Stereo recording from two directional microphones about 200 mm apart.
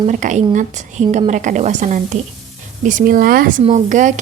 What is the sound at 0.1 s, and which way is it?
A woman's voice, 40° right (ahead or behind).